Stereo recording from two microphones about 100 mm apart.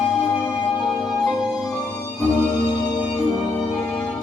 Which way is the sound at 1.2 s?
Centre (ahead or behind).